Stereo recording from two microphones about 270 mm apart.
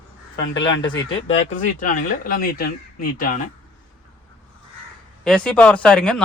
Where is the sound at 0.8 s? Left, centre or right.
Left.